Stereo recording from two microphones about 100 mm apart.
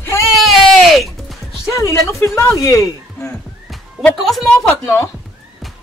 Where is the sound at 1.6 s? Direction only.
30° left (ahead or behind).